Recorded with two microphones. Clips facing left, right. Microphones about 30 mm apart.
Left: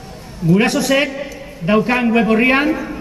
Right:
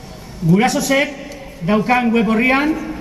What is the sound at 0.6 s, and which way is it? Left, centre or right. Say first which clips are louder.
Speech: left 1 dB; left.